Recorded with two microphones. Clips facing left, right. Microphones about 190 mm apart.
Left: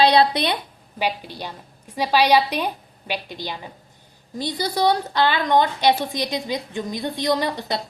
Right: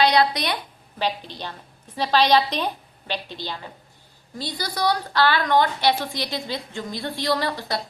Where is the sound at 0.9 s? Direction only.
10° left (ahead or behind).